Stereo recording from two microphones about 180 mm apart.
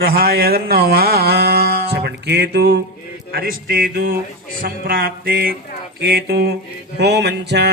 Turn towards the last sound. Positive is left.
turn(degrees=-70)  # may be behind; listen again after turning